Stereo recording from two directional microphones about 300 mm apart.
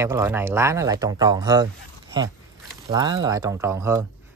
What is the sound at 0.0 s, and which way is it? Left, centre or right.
Speech, centre.